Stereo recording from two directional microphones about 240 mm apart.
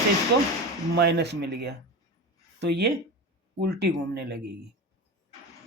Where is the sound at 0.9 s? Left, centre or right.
Right.